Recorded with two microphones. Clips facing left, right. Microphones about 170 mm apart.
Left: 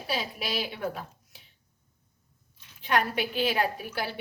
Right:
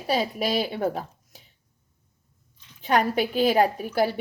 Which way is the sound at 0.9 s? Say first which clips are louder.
Right 6 dB; 40° right (ahead or behind).